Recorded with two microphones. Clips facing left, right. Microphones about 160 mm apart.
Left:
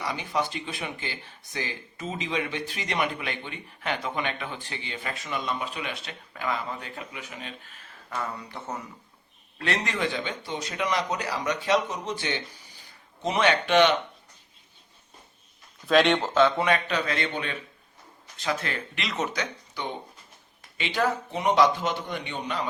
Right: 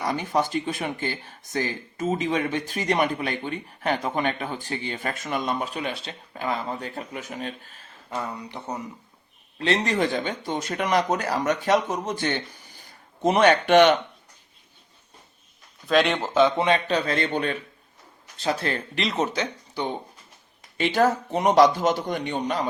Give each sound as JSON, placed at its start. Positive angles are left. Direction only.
{"t": 0.0, "sound": "speech", "side_deg": -45}
{"t": 8.1, "sound": "speech", "side_deg": -20}
{"t": 15.9, "sound": "speech", "side_deg": 0}
{"t": 16.3, "sound": "a man's voice", "side_deg": -15}
{"t": 20.7, "sound": "a man's voice", "side_deg": -45}